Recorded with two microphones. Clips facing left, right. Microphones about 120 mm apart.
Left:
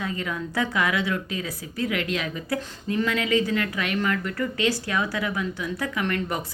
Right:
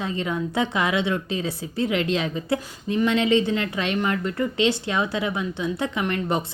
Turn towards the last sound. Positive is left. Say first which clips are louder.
# right 3 dB
turn(degrees=-25)  # may be behind; listen again after turning